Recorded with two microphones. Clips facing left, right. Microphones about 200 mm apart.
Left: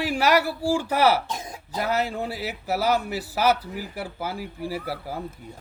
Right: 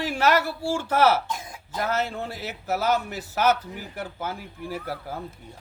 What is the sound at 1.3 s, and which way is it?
Cough, 35° left (ahead or behind).